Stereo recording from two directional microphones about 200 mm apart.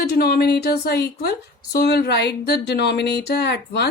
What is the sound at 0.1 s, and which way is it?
A woman's voice, 55° left (ahead or behind).